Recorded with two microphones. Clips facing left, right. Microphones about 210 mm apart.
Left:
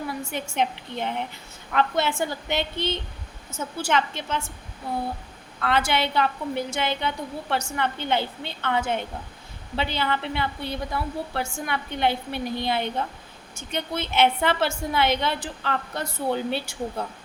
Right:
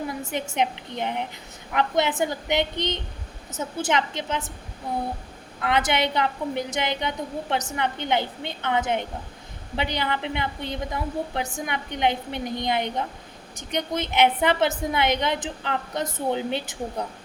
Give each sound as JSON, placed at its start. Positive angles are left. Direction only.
{"t": 0.3, "sound": "a woman's voice", "side_deg": -20}
{"t": 5.5, "sound": "a woman's voice", "side_deg": -20}